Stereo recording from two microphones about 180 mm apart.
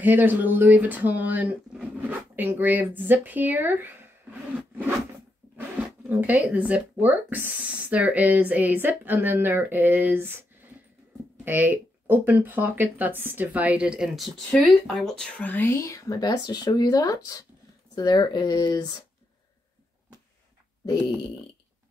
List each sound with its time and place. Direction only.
0.0 s speech: 10° right (ahead or behind)
6.0 s speech: 10° right (ahead or behind); by 18.9 s 20° left (ahead or behind)